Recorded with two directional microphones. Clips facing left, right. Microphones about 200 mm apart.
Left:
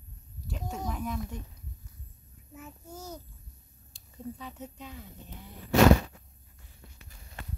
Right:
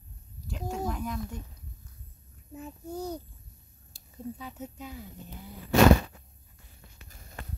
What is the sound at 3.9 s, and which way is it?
Speech, 5° right (ahead or behind).